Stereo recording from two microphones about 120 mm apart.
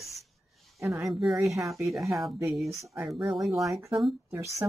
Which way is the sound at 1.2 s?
Centre (ahead or behind).